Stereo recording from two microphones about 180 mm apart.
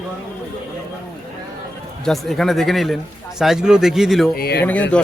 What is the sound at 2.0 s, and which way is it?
A man's voice, centre (ahead or behind).